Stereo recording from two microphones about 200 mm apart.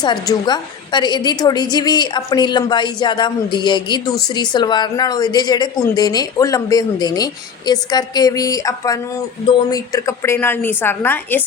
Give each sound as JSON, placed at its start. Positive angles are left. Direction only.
{"t": 0.0, "sound": "a woman's voice", "side_deg": 20}